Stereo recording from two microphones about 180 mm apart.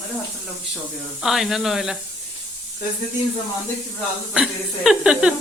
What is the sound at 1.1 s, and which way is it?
Speech, centre (ahead or behind).